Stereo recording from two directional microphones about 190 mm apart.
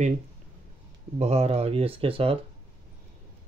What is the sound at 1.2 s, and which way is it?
Speech, 35° right (ahead or behind).